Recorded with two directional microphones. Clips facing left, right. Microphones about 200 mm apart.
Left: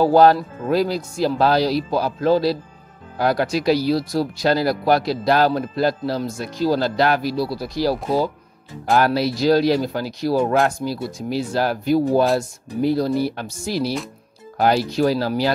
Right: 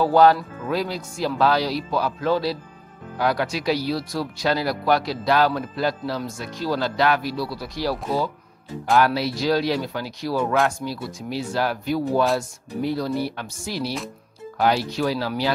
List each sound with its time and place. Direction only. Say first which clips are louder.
0.0 s speech: left 3 dB; 40° left (ahead or behind)